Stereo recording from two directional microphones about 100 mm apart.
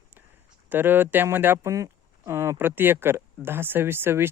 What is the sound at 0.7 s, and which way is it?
Speech, 20° right (ahead or behind).